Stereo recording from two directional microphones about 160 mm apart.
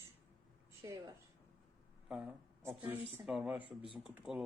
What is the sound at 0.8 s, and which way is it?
Speech, 20° right (ahead or behind).